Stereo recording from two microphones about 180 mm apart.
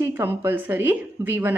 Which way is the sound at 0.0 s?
10° right (ahead or behind).